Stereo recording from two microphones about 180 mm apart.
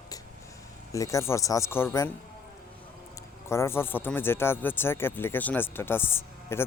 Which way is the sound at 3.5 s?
15° left (ahead or behind).